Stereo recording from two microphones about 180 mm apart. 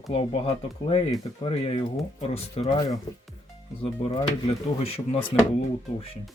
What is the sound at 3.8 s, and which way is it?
Speech, 30° left (ahead or behind).